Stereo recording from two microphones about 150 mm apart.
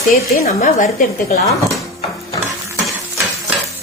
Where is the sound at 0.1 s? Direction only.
60° left (ahead or behind).